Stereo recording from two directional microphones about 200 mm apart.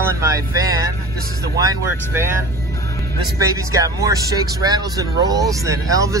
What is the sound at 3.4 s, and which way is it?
Speech, 15° right (ahead or behind).